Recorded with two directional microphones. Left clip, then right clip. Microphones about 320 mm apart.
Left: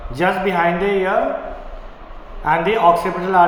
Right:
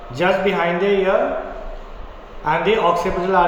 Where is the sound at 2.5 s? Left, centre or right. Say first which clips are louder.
Left 3 dB; centre.